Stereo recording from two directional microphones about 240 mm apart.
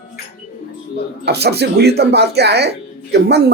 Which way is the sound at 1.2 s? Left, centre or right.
Right.